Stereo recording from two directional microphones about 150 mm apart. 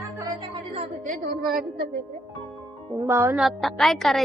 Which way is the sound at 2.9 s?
20° right (ahead or behind).